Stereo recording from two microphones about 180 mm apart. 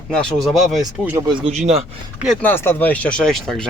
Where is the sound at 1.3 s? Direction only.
30° right (ahead or behind).